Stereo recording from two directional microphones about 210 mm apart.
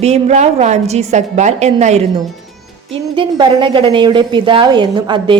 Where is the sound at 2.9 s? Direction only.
25° right (ahead or behind).